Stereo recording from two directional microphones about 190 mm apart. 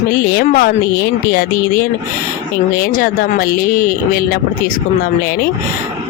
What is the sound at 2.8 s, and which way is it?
Speech, 50° left (ahead or behind).